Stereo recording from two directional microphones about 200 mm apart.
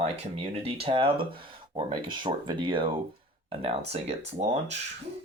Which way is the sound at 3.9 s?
35° right (ahead or behind).